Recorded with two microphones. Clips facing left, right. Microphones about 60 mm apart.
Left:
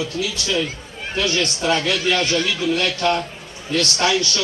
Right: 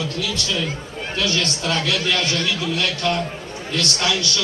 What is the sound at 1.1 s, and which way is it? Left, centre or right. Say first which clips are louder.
A man's voice: left 2 dB; left.